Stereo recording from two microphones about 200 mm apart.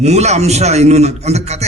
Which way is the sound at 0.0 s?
35° right (ahead or behind).